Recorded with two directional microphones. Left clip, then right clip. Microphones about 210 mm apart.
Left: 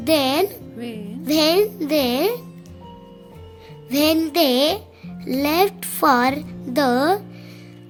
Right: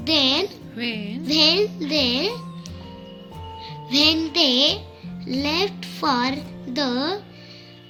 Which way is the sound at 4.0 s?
60° left (ahead or behind).